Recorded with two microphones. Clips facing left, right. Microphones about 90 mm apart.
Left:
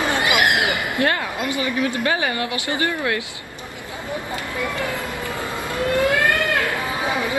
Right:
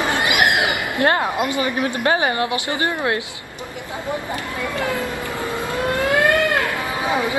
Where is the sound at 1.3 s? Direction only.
30° right (ahead or behind).